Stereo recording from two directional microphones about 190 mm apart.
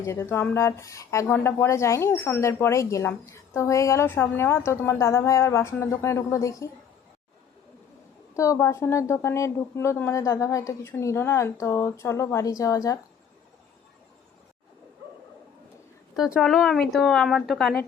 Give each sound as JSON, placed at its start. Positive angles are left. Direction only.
{"t": 0.0, "sound": "speech", "side_deg": 15}
{"t": 8.4, "sound": "speech", "side_deg": 15}
{"t": 16.1, "sound": "speech", "side_deg": 0}